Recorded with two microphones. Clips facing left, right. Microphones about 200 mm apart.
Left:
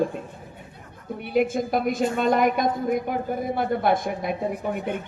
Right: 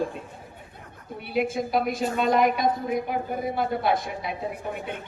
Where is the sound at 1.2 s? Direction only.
50° left (ahead or behind).